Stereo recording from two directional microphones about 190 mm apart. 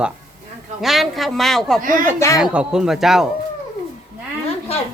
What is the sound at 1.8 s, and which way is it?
Speech, 45° right (ahead or behind).